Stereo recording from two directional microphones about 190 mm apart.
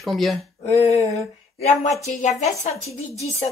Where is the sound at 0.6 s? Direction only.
35° left (ahead or behind).